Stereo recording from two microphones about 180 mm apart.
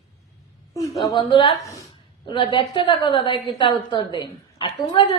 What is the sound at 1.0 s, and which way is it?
A woman's voice, 25° left (ahead or behind).